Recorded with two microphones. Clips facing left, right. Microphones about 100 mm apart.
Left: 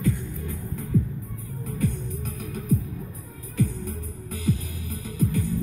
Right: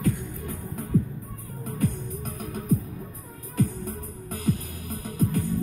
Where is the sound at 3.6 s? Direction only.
45° right (ahead or behind).